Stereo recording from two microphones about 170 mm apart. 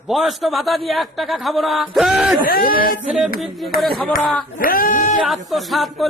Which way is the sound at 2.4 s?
60° left (ahead or behind).